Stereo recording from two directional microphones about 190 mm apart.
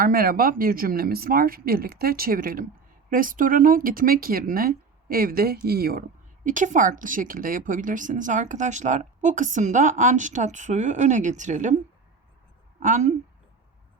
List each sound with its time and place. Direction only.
0.0 s speech: 50° right (ahead or behind)
12.8 s a woman's voice: 40° right (ahead or behind)